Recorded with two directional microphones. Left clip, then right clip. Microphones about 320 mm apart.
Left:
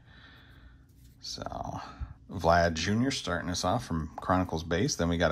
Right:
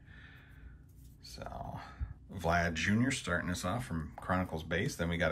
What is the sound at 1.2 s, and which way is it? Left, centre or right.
Speech, centre.